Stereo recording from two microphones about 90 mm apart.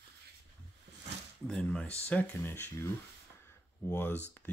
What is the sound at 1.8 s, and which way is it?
Speech, 15° left (ahead or behind).